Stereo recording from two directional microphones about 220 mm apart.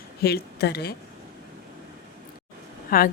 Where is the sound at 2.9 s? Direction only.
40° left (ahead or behind).